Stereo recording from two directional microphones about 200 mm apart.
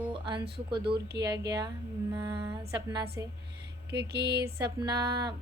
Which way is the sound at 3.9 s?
55° right (ahead or behind).